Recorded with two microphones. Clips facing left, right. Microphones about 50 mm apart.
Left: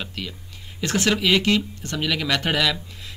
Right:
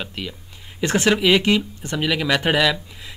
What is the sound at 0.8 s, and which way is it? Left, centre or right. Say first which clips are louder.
Speech: right 4 dB; right.